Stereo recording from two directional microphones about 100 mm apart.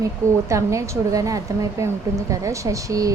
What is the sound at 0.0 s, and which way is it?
Speech, 30° right (ahead or behind).